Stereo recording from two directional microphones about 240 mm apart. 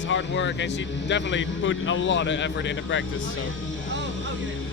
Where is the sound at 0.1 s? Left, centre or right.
Left.